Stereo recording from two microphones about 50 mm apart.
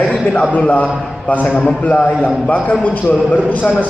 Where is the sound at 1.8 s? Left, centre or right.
Left.